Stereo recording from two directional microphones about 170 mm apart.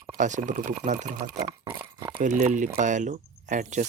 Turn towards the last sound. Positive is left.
turn(degrees=-45)  # may be behind; listen again after turning